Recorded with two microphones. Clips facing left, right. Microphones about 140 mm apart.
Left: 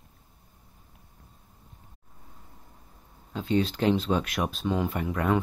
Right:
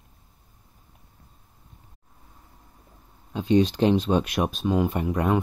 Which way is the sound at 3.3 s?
15° right (ahead or behind).